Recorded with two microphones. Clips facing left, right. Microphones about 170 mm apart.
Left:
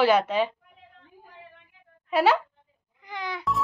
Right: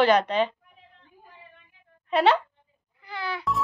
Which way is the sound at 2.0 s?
5° left (ahead or behind).